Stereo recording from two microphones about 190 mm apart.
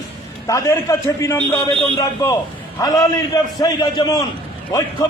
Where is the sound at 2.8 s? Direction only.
20° left (ahead or behind).